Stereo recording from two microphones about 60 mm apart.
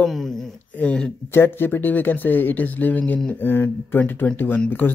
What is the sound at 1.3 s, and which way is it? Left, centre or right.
Speech, left.